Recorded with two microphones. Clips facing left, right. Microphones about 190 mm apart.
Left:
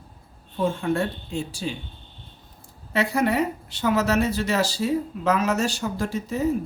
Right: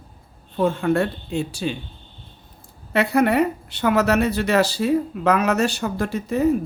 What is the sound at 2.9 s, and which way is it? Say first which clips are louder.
Speech: right 4 dB; 60° right (ahead or behind).